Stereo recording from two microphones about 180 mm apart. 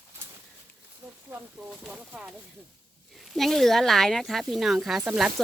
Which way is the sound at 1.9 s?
5° right (ahead or behind).